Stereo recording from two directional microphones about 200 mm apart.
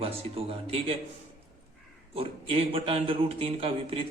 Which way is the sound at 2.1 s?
30° right (ahead or behind).